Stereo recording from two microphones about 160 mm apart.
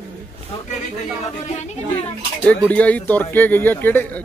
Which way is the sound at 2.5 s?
10° left (ahead or behind).